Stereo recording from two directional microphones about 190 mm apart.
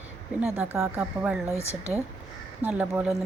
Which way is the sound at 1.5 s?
15° left (ahead or behind).